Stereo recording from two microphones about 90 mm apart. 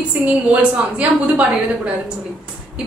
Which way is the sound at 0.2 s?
15° right (ahead or behind).